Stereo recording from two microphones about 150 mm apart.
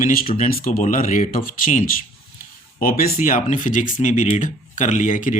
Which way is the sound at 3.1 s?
60° left (ahead or behind).